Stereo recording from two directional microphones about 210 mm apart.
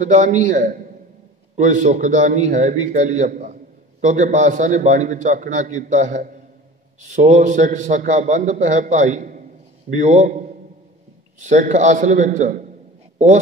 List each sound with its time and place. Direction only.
0.0 s a man's voice: 35° right (ahead or behind)
11.4 s a man's voice: 35° right (ahead or behind)